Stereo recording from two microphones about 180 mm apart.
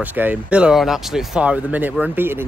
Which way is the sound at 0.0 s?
10° right (ahead or behind).